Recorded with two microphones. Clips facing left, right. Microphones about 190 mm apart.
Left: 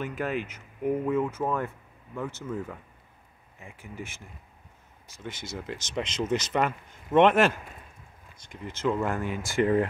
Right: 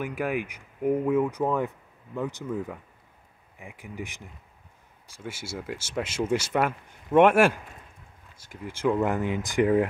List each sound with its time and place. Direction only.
0.0 s speech: 10° right (ahead or behind)